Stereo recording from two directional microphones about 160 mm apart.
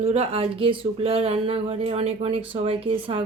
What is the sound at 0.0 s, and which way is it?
Speech, 40° right (ahead or behind).